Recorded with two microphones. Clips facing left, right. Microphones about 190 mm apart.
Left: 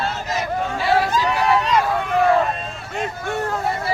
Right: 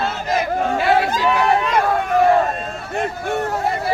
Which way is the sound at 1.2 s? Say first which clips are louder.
Right 2 dB; 55° right (ahead or behind).